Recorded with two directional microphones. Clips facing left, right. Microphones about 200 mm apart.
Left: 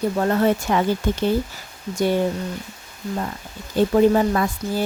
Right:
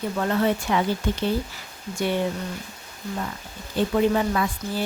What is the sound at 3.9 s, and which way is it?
Speech, 40° left (ahead or behind).